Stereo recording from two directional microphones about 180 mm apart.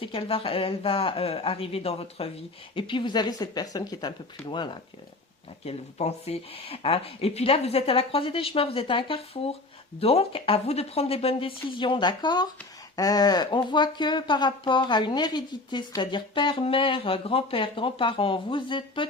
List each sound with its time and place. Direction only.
0.0 s speech: 30° left (ahead or behind)